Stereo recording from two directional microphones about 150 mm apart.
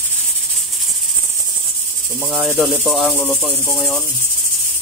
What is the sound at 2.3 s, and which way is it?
Speech, 10° right (ahead or behind).